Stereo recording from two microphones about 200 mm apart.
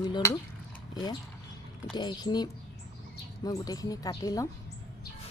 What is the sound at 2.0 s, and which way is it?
A woman's voice, 20° left (ahead or behind).